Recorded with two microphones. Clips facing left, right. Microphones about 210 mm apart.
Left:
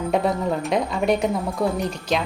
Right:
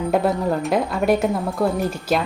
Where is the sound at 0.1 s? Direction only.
Centre (ahead or behind).